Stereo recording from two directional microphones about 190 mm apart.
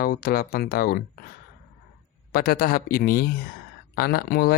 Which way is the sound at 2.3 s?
50° left (ahead or behind).